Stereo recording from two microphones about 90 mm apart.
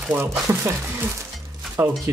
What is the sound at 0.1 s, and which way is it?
Speech, 30° right (ahead or behind).